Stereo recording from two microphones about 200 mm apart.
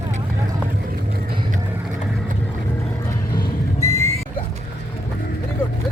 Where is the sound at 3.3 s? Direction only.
15° left (ahead or behind).